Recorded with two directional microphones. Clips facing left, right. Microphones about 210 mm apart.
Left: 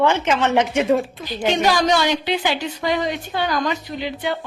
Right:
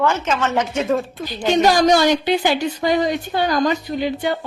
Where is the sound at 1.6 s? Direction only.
45° right (ahead or behind).